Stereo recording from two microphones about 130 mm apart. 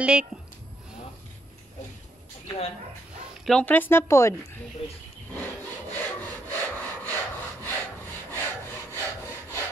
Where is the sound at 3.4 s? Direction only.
10° left (ahead or behind).